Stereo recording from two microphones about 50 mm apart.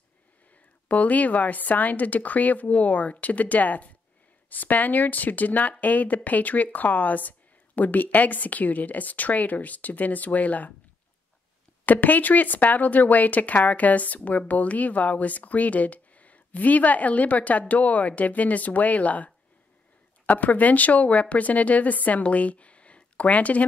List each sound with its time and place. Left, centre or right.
0.8 s speech: left
11.8 s speech: left